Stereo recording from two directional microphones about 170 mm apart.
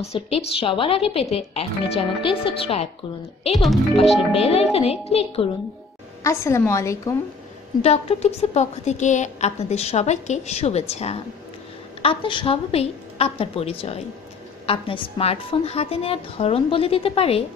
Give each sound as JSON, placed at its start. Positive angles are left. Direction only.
{"t": 0.0, "sound": "a woman's voice", "side_deg": 35}
{"t": 3.5, "sound": "speech", "side_deg": 0}
{"t": 3.9, "sound": "a woman's voice", "side_deg": 35}
{"t": 6.2, "sound": "a woman's voice", "side_deg": 15}
{"t": 7.8, "sound": "a woman's voice", "side_deg": 35}